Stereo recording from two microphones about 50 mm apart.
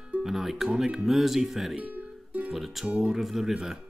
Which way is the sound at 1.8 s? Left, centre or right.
Right.